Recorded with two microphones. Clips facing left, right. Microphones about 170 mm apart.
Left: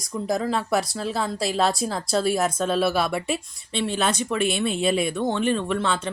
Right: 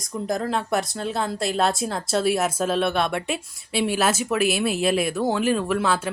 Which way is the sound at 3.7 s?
10° right (ahead or behind).